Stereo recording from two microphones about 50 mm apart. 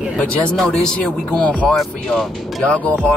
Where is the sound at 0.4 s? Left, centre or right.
Centre.